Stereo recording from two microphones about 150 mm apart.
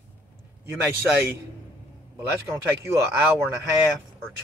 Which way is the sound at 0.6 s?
15° right (ahead or behind).